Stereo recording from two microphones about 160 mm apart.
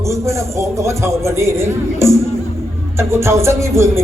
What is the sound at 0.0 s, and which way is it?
Speech, 20° right (ahead or behind).